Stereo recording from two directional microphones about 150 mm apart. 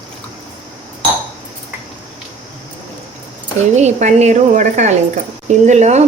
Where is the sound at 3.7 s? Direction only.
50° right (ahead or behind).